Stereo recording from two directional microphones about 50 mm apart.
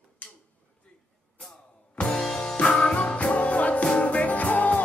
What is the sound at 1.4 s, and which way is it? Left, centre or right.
Music, centre.